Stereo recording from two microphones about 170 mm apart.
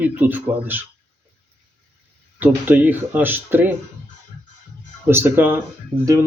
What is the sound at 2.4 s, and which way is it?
Speech, 10° right (ahead or behind).